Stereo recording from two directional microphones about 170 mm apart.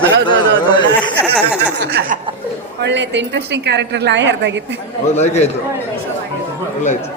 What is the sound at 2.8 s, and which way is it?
A woman's voice, 90° right.